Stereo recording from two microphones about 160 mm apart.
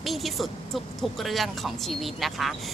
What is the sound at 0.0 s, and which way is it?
A woman's voice, centre (ahead or behind).